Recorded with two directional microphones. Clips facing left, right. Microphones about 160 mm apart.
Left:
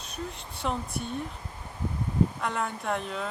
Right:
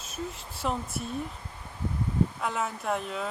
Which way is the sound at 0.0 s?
Centre (ahead or behind).